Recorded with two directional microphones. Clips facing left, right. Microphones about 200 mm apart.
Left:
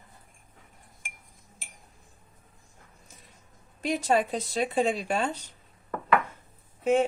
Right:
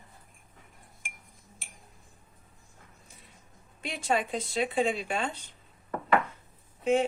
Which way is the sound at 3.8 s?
40° left (ahead or behind).